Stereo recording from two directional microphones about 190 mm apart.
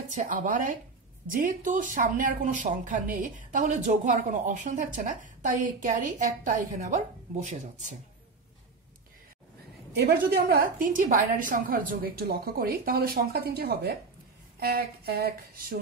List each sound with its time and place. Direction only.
0.1 s a woman's voice: 40° right (ahead or behind)
9.9 s a woman's voice: 55° right (ahead or behind)